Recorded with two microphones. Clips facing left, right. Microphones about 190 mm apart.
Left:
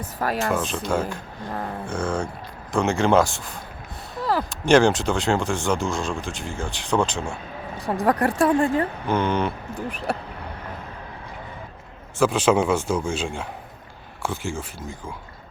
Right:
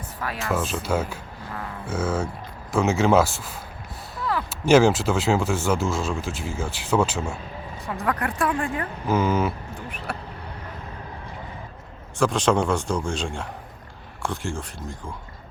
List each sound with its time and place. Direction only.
0.0 s speech: 40° left (ahead or behind)
0.3 s speech: centre (ahead or behind)
1.5 s speech: 35° left (ahead or behind)
1.9 s speech: 5° right (ahead or behind)
8.0 s speech: 35° left (ahead or behind)
8.5 s a woman's voice: 25° left (ahead or behind)
9.0 s speech: 5° right (ahead or behind)
12.2 s speech: 5° left (ahead or behind)